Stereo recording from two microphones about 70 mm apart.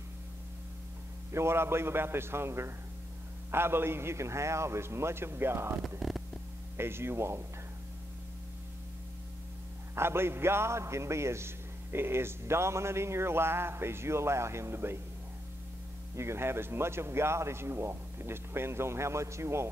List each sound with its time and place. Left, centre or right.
1.3 s a man's voice: right
5.9 s speech: centre
6.8 s a man's voice: right
9.9 s a man's voice: right
16.2 s a man's voice: right